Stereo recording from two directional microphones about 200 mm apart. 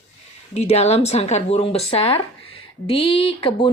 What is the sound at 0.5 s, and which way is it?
Speech, 35° left (ahead or behind).